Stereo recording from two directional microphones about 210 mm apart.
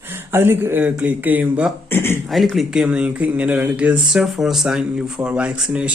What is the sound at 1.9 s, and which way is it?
Speech, 10° left (ahead or behind).